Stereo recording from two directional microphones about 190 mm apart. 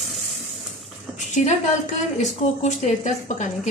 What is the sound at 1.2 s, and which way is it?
A woman's voice, 40° left (ahead or behind).